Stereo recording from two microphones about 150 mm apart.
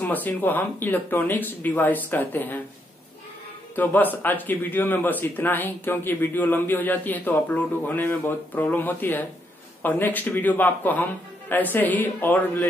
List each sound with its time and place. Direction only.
0.0 s speech: 10° left (ahead or behind)
3.7 s speech: 10° left (ahead or behind)